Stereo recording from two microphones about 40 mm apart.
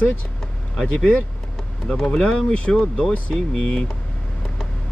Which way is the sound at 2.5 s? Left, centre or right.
Left.